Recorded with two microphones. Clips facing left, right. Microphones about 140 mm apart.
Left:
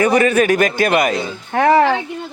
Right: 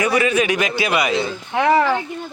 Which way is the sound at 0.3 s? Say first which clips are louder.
Left 4 dB; 50° left (ahead or behind).